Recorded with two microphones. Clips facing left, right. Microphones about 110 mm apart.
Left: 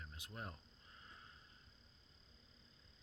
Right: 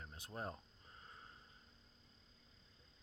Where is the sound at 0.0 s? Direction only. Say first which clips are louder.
Right 4 dB; 35° right (ahead or behind).